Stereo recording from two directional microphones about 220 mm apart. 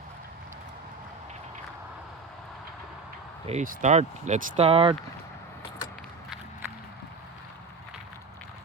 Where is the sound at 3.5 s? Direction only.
35° right (ahead or behind).